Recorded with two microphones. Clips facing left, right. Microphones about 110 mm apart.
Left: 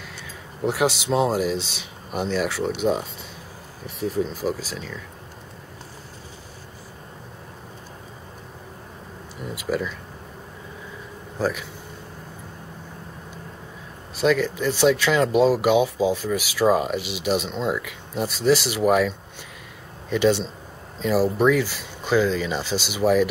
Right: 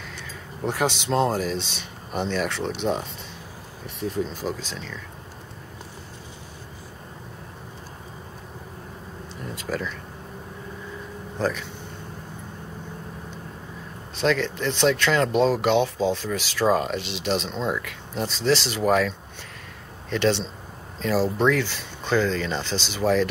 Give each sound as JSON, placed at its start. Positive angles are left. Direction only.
{"t": 0.7, "sound": "speech", "side_deg": 5}
{"t": 9.4, "sound": "speech", "side_deg": 10}
{"t": 11.3, "sound": "speech", "side_deg": 5}
{"t": 14.1, "sound": "speech", "side_deg": 5}